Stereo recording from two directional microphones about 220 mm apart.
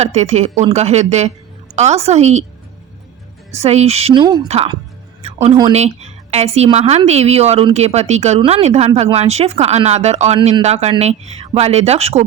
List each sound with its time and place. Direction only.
0.0 s speech: 30° right (ahead or behind)
3.5 s a woman's voice: 30° right (ahead or behind)